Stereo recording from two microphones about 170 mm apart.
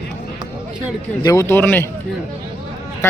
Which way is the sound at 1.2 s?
20° left (ahead or behind).